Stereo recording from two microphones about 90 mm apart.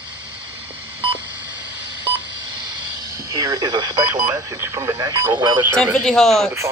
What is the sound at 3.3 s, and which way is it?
Speech, 50° right (ahead or behind).